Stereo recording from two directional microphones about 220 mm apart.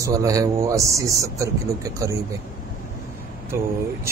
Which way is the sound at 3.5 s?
10° right (ahead or behind).